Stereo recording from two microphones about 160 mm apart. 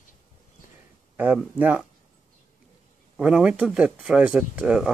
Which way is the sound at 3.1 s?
5° right (ahead or behind).